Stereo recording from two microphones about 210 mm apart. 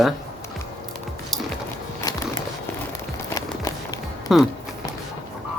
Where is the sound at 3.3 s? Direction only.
15° left (ahead or behind).